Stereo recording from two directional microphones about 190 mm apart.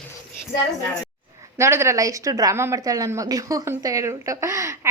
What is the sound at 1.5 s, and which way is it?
A woman's voice, 15° right (ahead or behind).